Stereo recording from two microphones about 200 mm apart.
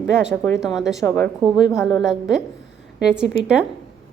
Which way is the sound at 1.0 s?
10° left (ahead or behind).